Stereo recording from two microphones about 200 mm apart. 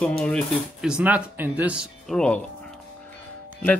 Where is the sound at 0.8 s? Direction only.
5° right (ahead or behind).